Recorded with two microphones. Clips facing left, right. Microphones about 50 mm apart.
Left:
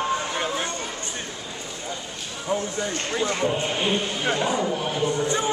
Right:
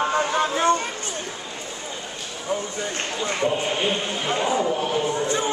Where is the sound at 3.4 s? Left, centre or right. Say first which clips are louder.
Right 1 dB; centre.